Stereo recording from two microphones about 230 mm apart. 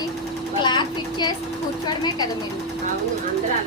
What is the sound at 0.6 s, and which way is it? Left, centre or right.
A woman's voice, centre.